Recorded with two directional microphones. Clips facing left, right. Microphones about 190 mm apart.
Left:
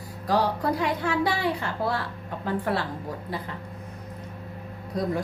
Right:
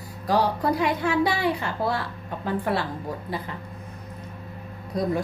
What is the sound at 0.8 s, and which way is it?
A woman's voice, 15° right (ahead or behind).